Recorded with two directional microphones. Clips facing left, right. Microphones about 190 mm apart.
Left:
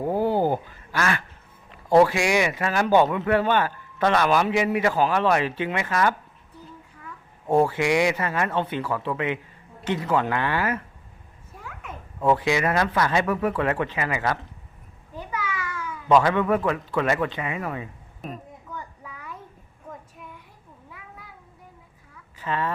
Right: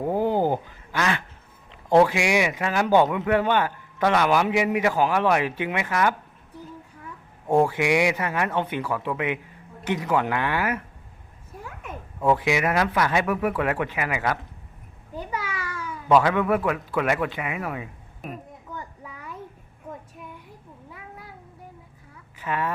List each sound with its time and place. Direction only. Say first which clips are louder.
0.2 s quack: even; 15° right (ahead or behind)
2.0 s a man's voice: even; 15° right (ahead or behind)
7.6 s a man's voice: even; 15° right (ahead or behind)
12.2 s a man's voice: even; 10° right (ahead or behind)
15.3 s a sound: left 2 dB; 35° right (ahead or behind)
16.0 s a man's voice: even; 10° right (ahead or behind)
22.4 s a child's voice: even; 10° right (ahead or behind)